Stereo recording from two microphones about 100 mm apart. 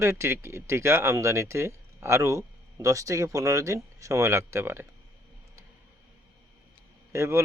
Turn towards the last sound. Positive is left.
turn(degrees=-30)  # may be behind; listen again after turning